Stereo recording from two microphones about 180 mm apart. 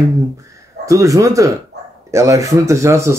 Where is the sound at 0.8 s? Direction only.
20° right (ahead or behind).